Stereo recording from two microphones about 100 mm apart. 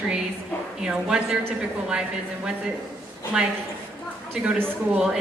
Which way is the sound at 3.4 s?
5° right (ahead or behind).